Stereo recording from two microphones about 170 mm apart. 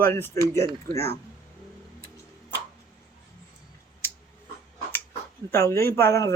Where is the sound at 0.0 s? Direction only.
10° left (ahead or behind).